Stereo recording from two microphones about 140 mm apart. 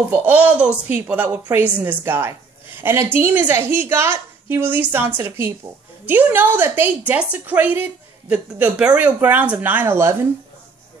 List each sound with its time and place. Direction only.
0.1 s a woman's voice: 10° right (ahead or behind)